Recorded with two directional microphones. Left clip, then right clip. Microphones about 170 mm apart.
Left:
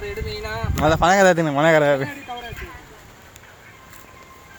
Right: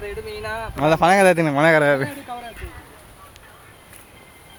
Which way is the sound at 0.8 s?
15° right (ahead or behind).